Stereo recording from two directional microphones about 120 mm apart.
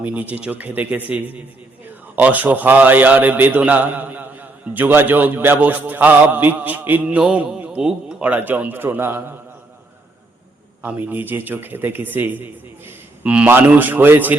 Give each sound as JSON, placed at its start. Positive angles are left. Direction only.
{"t": 0.0, "sound": "a man's voice", "side_deg": -15}
{"t": 10.8, "sound": "a man's voice", "side_deg": -15}